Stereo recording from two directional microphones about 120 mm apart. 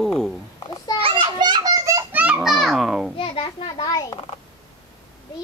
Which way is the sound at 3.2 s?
50° left (ahead or behind).